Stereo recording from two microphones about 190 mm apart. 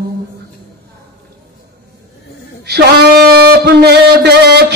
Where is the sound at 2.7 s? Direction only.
60° right (ahead or behind).